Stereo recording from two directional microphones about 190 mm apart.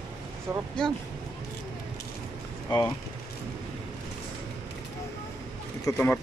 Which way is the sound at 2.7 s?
25° left (ahead or behind).